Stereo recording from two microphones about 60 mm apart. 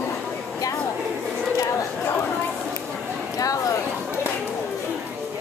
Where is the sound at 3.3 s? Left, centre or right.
Left.